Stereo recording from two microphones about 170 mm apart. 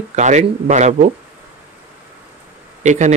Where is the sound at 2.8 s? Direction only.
45° right (ahead or behind).